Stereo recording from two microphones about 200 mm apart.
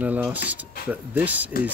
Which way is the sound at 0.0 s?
5° right (ahead or behind).